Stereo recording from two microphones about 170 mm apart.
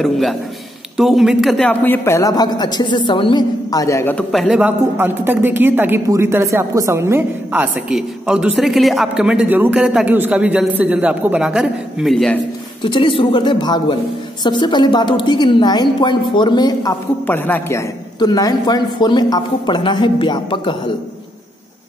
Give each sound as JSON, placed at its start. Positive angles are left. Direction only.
{"t": 0.0, "sound": "a man's voice", "side_deg": 0}
{"t": 12.8, "sound": "a man's voice", "side_deg": 30}
{"t": 17.3, "sound": "a man's voice", "side_deg": 10}